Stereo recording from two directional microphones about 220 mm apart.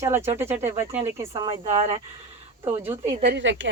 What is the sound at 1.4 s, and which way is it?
Speech, 25° right (ahead or behind).